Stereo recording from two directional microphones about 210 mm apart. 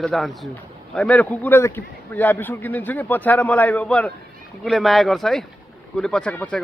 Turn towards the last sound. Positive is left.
turn(degrees=5)  # may be behind; listen again after turning